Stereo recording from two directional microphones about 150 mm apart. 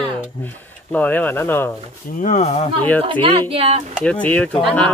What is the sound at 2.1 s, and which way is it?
Speech, 60° left (ahead or behind).